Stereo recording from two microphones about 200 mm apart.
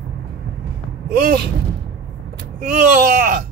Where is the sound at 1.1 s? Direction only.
50° right (ahead or behind).